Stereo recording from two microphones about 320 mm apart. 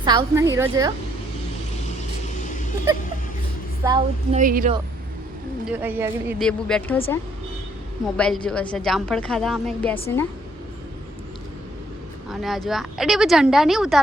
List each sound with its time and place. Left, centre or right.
0.0 s a woman's voice: centre
3.8 s speech: right
5.6 s a woman's voice: centre
8.1 s a woman's voice: centre
12.3 s a woman's voice: centre